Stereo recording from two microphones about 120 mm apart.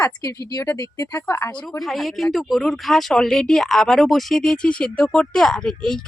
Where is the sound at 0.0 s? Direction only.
25° left (ahead or behind).